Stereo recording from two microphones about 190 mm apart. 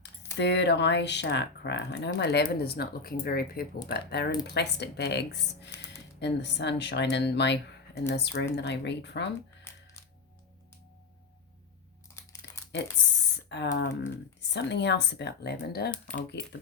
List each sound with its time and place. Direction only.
0.0 s speech: 65° left (ahead or behind)
5.7 s a sound: 15° left (ahead or behind)
6.1 s speech: 65° left (ahead or behind)
9.7 s coin: 15° left (ahead or behind)
12.7 s speech: 65° left (ahead or behind)